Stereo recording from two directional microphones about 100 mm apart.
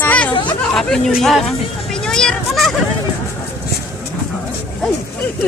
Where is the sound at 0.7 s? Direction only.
5° left (ahead or behind).